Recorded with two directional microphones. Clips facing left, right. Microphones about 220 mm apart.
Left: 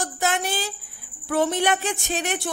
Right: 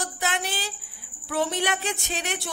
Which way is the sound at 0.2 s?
45° left (ahead or behind).